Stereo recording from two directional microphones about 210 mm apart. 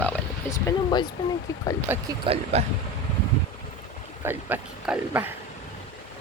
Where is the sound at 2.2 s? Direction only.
30° right (ahead or behind).